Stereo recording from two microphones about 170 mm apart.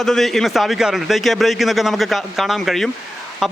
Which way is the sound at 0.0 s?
Centre (ahead or behind).